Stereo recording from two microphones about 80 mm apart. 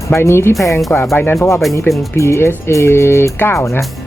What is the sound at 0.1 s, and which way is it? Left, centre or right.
Speech, left.